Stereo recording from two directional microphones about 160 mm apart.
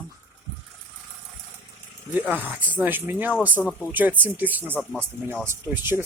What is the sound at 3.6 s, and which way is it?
Speech, centre (ahead or behind).